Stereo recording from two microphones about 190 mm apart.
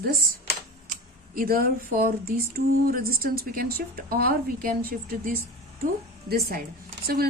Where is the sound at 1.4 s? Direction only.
50° right (ahead or behind).